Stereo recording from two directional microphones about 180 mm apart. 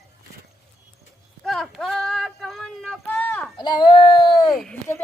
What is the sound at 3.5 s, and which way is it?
Speech, 25° left (ahead or behind).